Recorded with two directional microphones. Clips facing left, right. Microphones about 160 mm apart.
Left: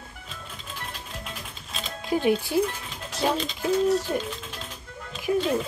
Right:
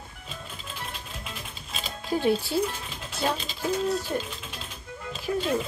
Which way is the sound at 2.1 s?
15° left (ahead or behind).